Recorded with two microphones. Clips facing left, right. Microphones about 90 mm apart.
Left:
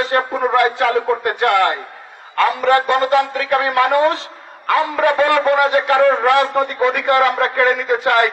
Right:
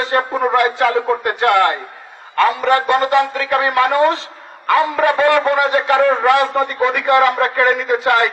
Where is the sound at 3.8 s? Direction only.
20° left (ahead or behind).